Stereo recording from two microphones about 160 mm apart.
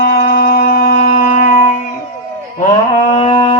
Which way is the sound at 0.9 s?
50° left (ahead or behind).